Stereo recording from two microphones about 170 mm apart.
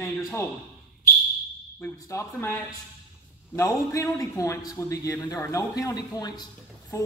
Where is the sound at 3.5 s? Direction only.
15° left (ahead or behind).